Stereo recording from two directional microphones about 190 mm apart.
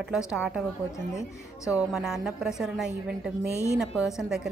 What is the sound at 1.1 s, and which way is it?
Speech, 15° left (ahead or behind).